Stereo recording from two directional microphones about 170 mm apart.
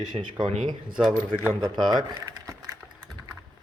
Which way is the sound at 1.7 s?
25° right (ahead or behind).